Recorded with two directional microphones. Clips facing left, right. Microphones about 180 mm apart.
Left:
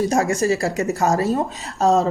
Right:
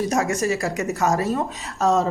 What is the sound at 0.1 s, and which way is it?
Speech, 30° left (ahead or behind).